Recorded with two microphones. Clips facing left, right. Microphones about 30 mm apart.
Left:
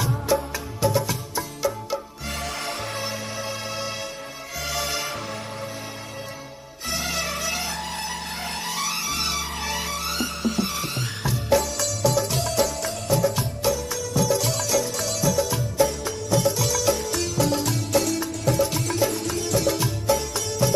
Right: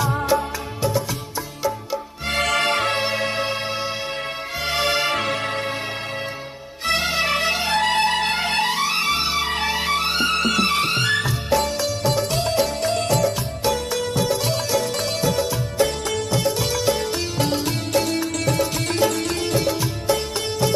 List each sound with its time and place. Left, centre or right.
2.2 s music: right
4.6 s music: right
5.1 s music: right
6.9 s music: right
7.8 s music: right
8.9 s music: right
10.3 s music: right
12.1 s music: right
12.6 s music: right
14.3 s music: right
14.8 s music: right
18.2 s music: right
20.1 s music: right